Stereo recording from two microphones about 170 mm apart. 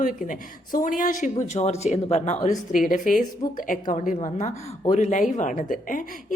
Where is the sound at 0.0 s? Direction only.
50° left (ahead or behind).